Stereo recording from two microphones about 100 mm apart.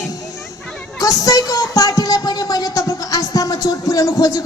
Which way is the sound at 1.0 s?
35° left (ahead or behind).